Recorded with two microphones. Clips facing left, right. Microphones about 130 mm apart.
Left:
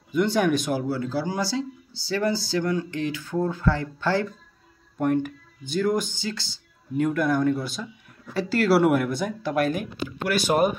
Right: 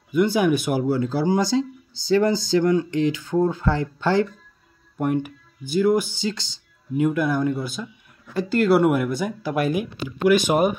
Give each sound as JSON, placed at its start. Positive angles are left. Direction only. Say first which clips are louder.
{"t": 0.1, "sound": "speech", "louder": "right 3 dB", "side_deg": -5}
{"t": 0.7, "sound": "speech", "louder": "right 5 dB", "side_deg": -20}
{"t": 4.9, "sound": "speech", "louder": "even", "side_deg": -10}